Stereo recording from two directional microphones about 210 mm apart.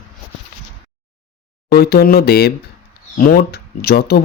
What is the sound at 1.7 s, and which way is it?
Speech, 50° left (ahead or behind).